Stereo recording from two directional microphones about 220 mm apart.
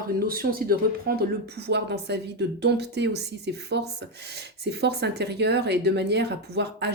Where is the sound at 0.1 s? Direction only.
40° right (ahead or behind).